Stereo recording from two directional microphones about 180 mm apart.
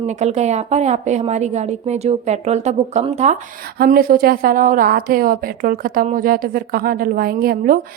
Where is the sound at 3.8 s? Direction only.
55° right (ahead or behind).